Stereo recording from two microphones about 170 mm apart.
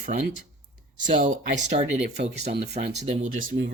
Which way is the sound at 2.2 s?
70° right (ahead or behind).